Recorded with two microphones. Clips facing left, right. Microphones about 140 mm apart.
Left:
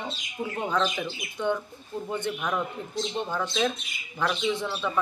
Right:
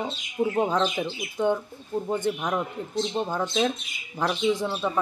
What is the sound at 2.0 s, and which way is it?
Speech, 45° right (ahead or behind).